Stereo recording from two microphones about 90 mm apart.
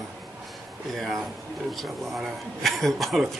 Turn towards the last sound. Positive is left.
turn(degrees=0)  # may be behind; listen again after turning